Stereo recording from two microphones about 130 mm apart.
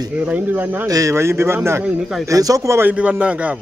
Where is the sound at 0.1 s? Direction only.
10° right (ahead or behind).